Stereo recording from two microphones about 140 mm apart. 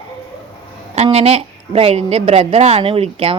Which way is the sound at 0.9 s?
50° right (ahead or behind).